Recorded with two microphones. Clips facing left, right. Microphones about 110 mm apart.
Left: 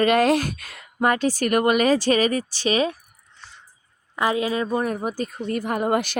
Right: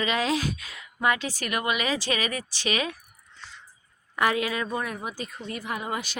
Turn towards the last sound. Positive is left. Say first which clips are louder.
# left 9 dB
turn(degrees=55)  # may be behind; listen again after turning